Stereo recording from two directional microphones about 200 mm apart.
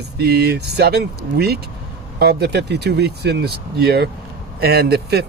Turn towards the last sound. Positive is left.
turn(degrees=-55)  # may be behind; listen again after turning